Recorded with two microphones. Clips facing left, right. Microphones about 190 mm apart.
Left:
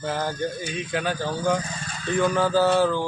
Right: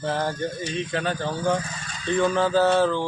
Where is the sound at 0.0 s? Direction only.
5° left (ahead or behind).